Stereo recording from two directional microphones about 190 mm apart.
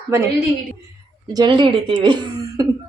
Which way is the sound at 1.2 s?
25° right (ahead or behind).